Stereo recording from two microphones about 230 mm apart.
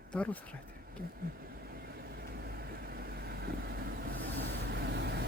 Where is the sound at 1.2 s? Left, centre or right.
Right.